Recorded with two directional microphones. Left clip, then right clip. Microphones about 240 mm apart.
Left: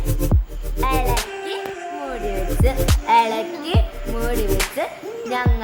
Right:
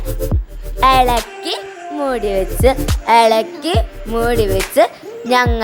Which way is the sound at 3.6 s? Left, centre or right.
Right.